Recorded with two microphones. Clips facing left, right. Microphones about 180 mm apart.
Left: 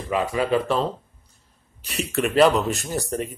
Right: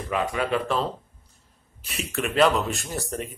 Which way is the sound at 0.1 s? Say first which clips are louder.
Left 3 dB; 30° left (ahead or behind).